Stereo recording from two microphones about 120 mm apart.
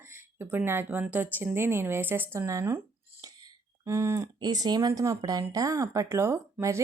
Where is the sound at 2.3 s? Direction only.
25° right (ahead or behind).